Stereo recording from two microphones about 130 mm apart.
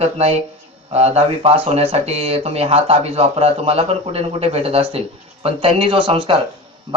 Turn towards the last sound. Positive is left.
turn(degrees=-40)  # may be behind; listen again after turning